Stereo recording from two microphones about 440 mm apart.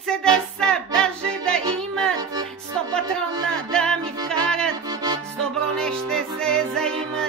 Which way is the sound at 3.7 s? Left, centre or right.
Centre.